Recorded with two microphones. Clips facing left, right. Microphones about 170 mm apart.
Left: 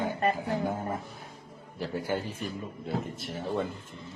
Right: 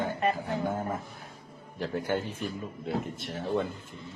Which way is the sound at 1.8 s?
5° left (ahead or behind).